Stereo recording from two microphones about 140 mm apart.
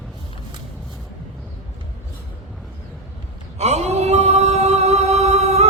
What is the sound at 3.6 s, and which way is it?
Music, 50° right (ahead or behind).